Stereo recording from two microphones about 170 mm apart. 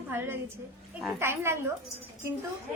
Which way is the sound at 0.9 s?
10° right (ahead or behind).